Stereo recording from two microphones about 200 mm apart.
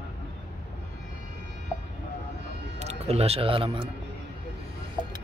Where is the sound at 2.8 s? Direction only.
35° right (ahead or behind).